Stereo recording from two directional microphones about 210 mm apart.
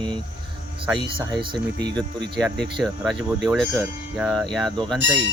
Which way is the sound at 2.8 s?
Centre (ahead or behind).